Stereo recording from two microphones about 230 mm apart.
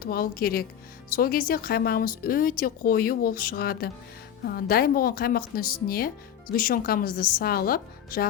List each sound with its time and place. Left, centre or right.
0.0 s speech: left